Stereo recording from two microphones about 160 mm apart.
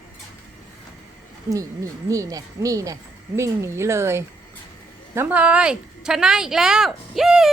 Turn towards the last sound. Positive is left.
turn(degrees=0)  # may be behind; listen again after turning